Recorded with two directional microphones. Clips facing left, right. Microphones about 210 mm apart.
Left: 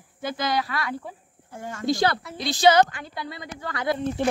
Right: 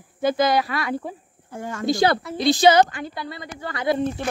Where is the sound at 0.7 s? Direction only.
15° right (ahead or behind).